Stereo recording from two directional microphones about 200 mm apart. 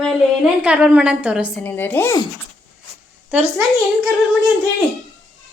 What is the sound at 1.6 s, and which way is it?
Speech, 10° left (ahead or behind).